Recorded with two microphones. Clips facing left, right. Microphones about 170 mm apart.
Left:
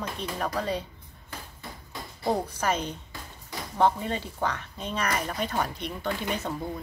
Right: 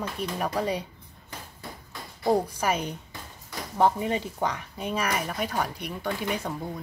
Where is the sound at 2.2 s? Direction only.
10° right (ahead or behind).